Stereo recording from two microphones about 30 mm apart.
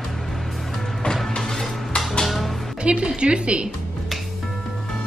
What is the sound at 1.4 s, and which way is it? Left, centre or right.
Music, left.